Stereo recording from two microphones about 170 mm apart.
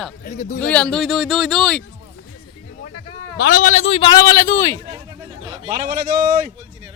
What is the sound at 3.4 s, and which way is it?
A man's voice, 55° left (ahead or behind).